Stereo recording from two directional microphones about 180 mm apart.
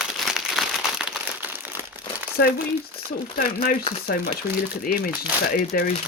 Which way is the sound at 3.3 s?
50° left (ahead or behind).